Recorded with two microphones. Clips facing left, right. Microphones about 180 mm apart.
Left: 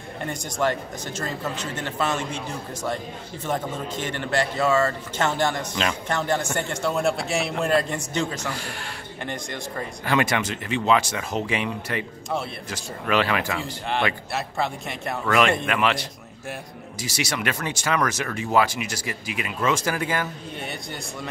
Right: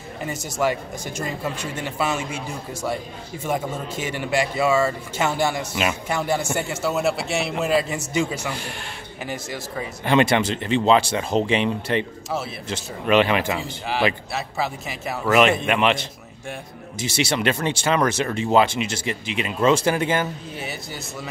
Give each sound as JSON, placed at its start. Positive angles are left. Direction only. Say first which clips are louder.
{"t": 0.2, "sound": "speech", "louder": "right 1 dB", "side_deg": -5}
{"t": 10.0, "sound": "speech", "louder": "right 5 dB", "side_deg": -25}
{"t": 14.3, "sound": "speech", "louder": "even", "side_deg": -5}
{"t": 15.2, "sound": "speech", "louder": "right 4 dB", "side_deg": -20}
{"t": 20.5, "sound": "speech", "louder": "right 1 dB", "side_deg": -5}